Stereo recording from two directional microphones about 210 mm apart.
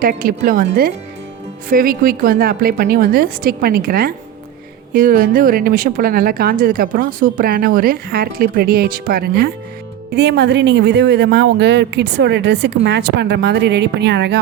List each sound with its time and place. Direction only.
0.0 s a woman's voice: 45° right (ahead or behind)